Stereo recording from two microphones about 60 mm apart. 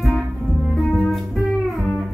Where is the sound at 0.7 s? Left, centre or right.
Centre.